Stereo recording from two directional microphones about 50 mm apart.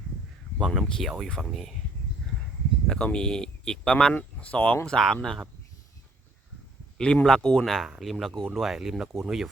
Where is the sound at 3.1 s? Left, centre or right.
Centre.